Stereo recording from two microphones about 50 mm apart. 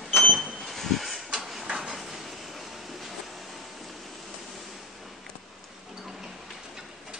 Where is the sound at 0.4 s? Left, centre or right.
Centre.